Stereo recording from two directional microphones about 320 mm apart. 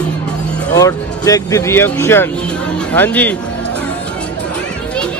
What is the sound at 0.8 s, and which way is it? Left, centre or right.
Speech, centre.